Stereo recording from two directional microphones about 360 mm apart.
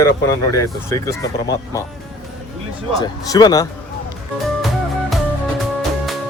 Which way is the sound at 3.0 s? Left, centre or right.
Centre.